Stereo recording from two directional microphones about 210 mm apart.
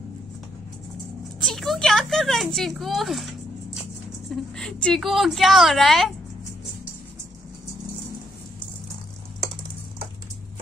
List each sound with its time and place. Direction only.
1.4 s a woman's voice: centre (ahead or behind)